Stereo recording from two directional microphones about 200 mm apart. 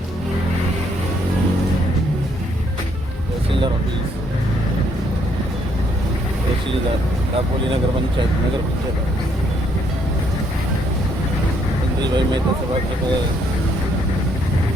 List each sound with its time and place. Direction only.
12.0 s speech: 20° right (ahead or behind)